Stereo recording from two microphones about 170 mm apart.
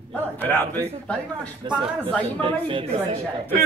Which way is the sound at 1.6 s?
30° right (ahead or behind).